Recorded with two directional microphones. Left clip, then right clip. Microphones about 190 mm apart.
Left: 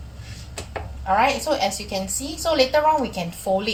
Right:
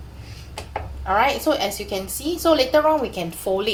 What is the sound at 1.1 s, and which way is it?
A woman's voice, 45° right (ahead or behind).